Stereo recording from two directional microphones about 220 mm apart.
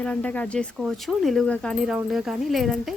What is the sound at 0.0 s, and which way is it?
Speech, 5° left (ahead or behind).